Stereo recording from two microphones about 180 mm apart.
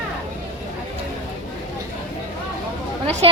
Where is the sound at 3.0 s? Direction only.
35° right (ahead or behind).